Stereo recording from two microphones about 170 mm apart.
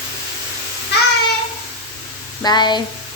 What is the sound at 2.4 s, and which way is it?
Speech, 25° left (ahead or behind).